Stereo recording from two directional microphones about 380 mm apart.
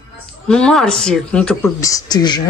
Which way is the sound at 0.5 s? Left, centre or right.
Centre.